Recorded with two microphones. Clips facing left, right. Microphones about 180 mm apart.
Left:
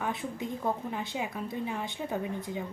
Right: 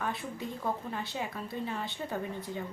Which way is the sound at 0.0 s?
20° left (ahead or behind).